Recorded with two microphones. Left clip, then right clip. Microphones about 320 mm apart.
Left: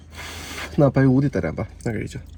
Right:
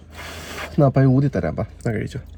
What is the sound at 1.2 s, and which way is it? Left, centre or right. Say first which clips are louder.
Speech: right 1 dB; centre.